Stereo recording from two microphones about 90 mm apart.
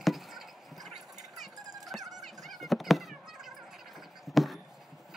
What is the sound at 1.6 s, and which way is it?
Music, 45° right (ahead or behind).